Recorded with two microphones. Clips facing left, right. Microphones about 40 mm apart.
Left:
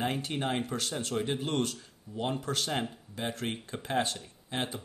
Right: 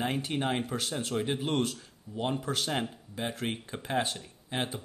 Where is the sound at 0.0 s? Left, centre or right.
Centre.